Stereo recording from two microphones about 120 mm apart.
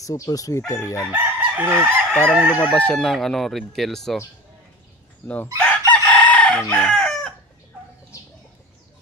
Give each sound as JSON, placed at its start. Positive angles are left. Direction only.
{"t": 0.0, "sound": "speech", "side_deg": 30}
{"t": 1.1, "sound": "chicken", "side_deg": -15}
{"t": 2.6, "sound": "speech", "side_deg": 10}
{"t": 5.6, "sound": "chicken", "side_deg": 10}